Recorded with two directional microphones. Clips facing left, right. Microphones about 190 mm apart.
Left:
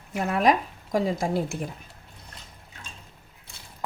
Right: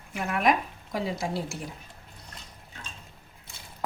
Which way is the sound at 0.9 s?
45° left (ahead or behind).